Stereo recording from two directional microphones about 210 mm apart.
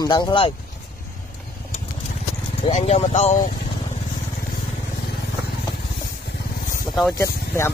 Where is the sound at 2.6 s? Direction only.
30° left (ahead or behind).